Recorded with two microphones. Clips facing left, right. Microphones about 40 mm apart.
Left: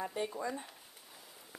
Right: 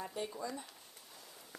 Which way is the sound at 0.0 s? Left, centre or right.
Left.